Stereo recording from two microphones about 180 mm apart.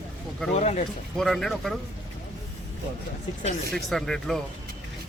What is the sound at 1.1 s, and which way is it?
Speech, centre (ahead or behind).